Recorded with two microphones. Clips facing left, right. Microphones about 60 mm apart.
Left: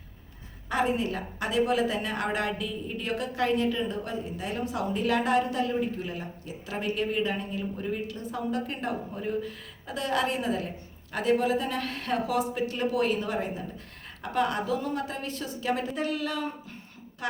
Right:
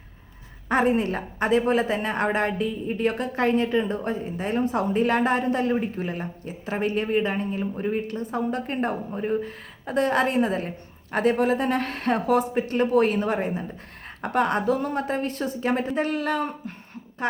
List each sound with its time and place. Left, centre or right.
0.7 s a woman's voice: right